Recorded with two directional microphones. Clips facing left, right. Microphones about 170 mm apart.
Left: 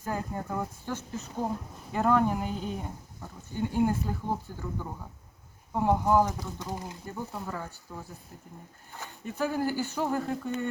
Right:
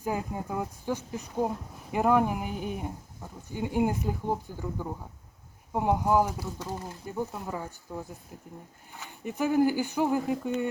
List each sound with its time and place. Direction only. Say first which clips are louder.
0.0 s speech: right 2 dB; 10° right (ahead or behind)
9.2 s speech: right 5 dB; 15° right (ahead or behind)